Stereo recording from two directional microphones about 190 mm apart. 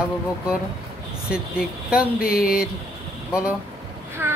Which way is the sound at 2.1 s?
50° left (ahead or behind).